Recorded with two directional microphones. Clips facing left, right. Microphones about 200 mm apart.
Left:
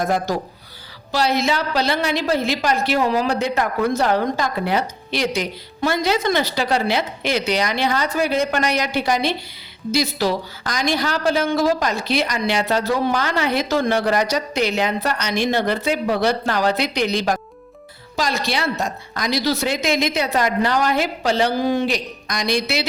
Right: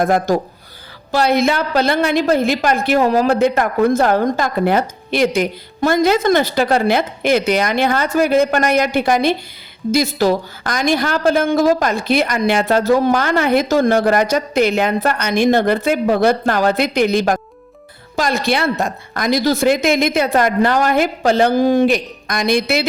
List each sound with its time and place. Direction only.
0.0 s a woman's voice: 55° right (ahead or behind)